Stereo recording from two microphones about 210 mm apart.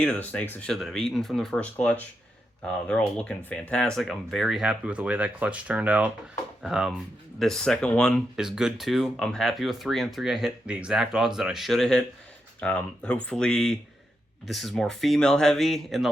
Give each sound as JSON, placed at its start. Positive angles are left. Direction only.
{"t": 0.0, "sound": "speech", "side_deg": 5}